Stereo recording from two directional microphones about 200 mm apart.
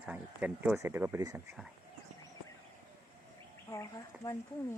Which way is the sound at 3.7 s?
15° left (ahead or behind).